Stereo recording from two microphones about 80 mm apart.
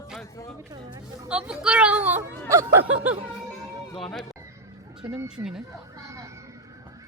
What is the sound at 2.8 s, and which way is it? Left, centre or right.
Snicker, right.